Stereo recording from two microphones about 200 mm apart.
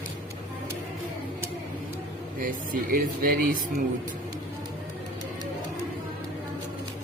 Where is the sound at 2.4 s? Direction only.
45° right (ahead or behind).